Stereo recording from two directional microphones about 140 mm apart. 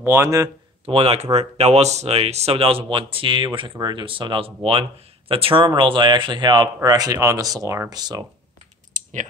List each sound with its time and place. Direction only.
0.0 s speech: 20° right (ahead or behind)
0.8 s speech: 45° right (ahead or behind); by 8.3 s 30° right (ahead or behind)